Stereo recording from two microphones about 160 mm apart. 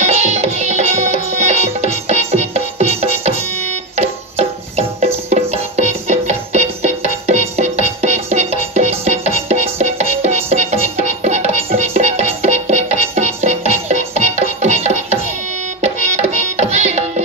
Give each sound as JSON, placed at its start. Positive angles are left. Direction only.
{"t": 0.0, "sound": "music", "side_deg": -45}